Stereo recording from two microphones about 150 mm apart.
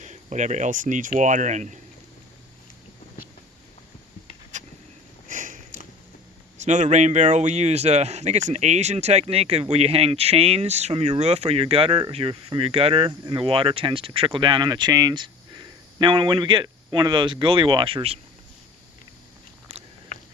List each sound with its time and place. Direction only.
0.0 s speech: 50° right (ahead or behind)
5.3 s sniff: 60° right (ahead or behind)
6.6 s speech: 55° right (ahead or behind)